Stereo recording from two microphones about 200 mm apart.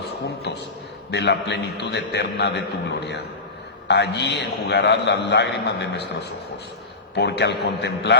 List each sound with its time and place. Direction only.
0.5 s a sound: 55° left (ahead or behind)
1.1 s a man's voice: 55° left (ahead or behind)
3.8 s a man's voice: 55° left (ahead or behind)
7.2 s a man's voice: 55° left (ahead or behind)